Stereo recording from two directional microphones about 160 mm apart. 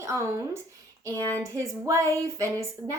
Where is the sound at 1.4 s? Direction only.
20° right (ahead or behind).